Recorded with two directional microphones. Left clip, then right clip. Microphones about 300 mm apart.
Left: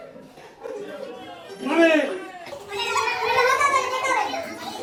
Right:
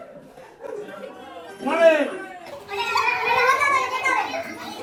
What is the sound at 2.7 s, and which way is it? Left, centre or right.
Children playing, centre.